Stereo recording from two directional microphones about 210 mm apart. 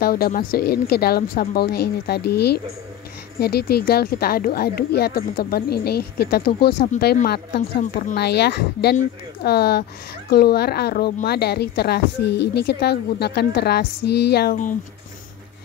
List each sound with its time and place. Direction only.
0.0 s a woman's voice: 45° left (ahead or behind)